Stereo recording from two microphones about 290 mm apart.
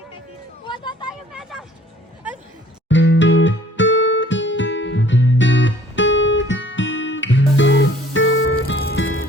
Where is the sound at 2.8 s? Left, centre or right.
Left.